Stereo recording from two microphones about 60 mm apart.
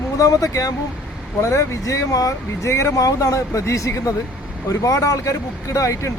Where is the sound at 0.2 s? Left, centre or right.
Left.